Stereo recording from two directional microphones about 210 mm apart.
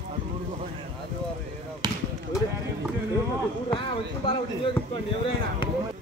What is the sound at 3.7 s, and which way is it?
Speech, 25° left (ahead or behind).